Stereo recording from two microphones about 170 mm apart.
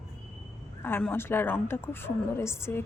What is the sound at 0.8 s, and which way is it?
A woman's voice, 10° left (ahead or behind).